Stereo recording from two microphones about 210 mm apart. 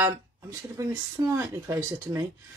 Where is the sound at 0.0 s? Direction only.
15° right (ahead or behind).